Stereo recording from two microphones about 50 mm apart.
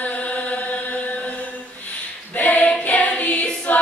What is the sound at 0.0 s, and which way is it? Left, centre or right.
Chant, left.